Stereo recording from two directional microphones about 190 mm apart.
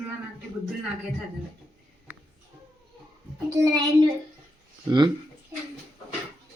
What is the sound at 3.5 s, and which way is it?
Speech, 20° right (ahead or behind).